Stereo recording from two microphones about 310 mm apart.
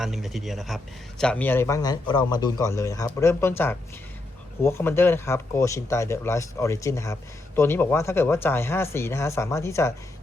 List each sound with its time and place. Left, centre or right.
0.0 s a man's voice: centre